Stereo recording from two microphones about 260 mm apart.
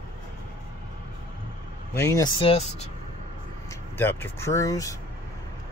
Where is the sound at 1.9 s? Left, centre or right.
Centre.